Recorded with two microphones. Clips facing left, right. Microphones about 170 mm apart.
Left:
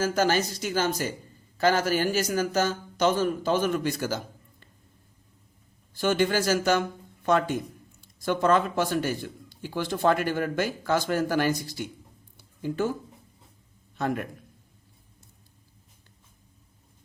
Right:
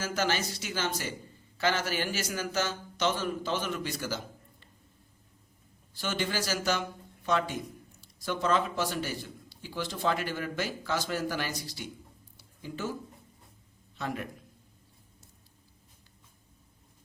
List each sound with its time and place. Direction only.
0.0 s speech: 45° left (ahead or behind)
5.9 s speech: 50° left (ahead or behind)
12.4 s a sound: 55° left (ahead or behind)
13.9 s a man's voice: 50° left (ahead or behind)